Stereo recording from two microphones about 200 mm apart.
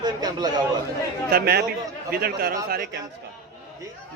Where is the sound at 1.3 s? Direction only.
50° right (ahead or behind).